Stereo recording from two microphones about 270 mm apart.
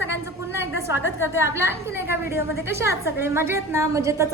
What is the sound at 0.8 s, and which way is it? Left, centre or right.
A woman's voice, centre.